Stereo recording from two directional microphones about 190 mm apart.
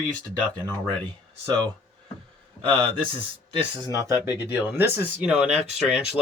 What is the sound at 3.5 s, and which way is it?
Speech, 20° right (ahead or behind).